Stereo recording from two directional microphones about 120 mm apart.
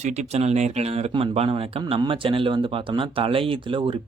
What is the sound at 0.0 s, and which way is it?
Speech, 70° right (ahead or behind).